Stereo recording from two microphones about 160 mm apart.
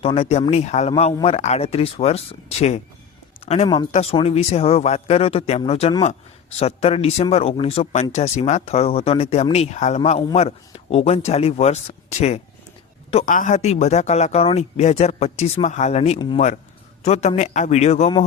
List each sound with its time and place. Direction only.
0.0 s speech: 40° left (ahead or behind)
13.1 s speech: 40° left (ahead or behind)
13.3 s speech: 50° left (ahead or behind)